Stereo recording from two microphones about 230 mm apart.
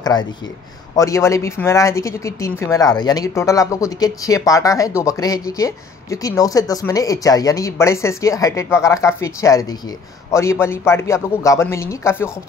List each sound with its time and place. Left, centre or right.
0.0 s speech: centre